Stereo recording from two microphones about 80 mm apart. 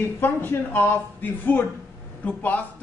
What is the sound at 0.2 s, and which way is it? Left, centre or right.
Speech, left.